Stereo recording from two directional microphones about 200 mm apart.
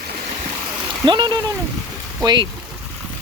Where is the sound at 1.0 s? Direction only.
20° right (ahead or behind).